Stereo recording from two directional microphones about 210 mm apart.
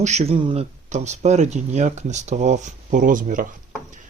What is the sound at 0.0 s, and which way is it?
A man's voice, 30° right (ahead or behind).